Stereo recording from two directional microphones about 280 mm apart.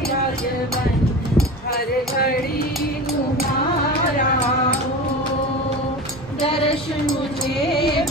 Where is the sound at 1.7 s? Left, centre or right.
Left.